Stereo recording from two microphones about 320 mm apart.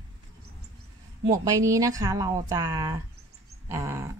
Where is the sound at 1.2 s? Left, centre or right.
Centre.